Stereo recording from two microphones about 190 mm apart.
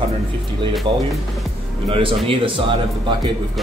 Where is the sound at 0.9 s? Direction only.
25° right (ahead or behind).